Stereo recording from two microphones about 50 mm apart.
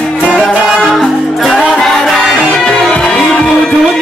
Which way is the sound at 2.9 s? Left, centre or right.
Centre.